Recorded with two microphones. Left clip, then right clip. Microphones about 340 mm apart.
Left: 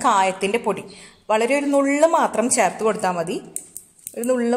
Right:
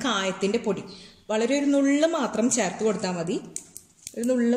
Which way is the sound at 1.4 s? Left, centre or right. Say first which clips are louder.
Left 2 dB; left.